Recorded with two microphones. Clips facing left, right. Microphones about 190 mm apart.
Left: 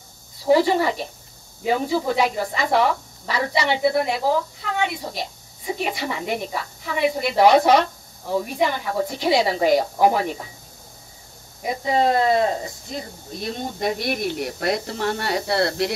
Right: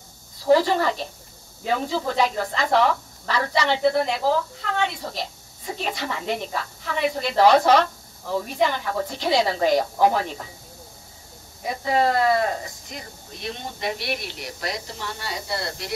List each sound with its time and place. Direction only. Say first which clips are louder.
0.5 s speech: left 1 dB; 10° left (ahead or behind)
11.6 s speech: left 1 dB; 20° left (ahead or behind)
13.4 s speech: left 5 dB; 40° left (ahead or behind); by 15.9 s 70° left (ahead or behind)